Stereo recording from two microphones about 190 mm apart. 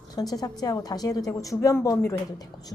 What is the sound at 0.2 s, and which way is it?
A woman's voice, 20° left (ahead or behind).